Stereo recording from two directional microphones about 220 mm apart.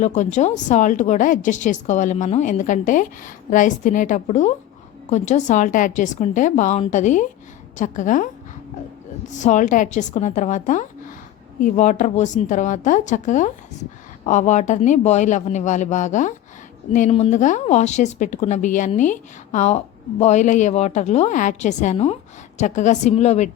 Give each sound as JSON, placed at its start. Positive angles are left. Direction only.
{"t": 0.0, "sound": "a woman's voice", "side_deg": 35}
{"t": 9.4, "sound": "a woman's voice", "side_deg": 35}